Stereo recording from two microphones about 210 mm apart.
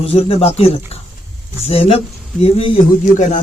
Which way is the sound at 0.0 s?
30° left (ahead or behind).